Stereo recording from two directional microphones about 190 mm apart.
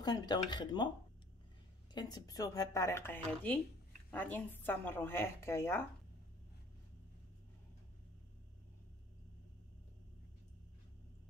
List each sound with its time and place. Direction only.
0.0 s speech: 20° left (ahead or behind)
2.0 s speech: 20° left (ahead or behind)